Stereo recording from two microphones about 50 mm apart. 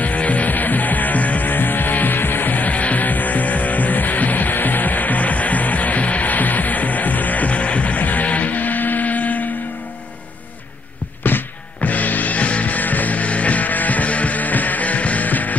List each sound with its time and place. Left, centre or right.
0.0 s music: left
11.2 s music: left